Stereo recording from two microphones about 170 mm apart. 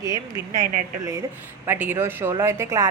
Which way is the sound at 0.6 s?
50° right (ahead or behind).